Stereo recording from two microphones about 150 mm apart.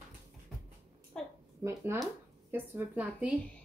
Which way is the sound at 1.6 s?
15° right (ahead or behind).